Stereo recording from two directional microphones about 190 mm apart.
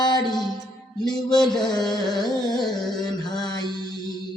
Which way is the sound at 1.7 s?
20° left (ahead or behind).